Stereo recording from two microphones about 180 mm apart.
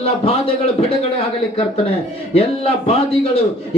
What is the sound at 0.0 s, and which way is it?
Speech, 35° left (ahead or behind).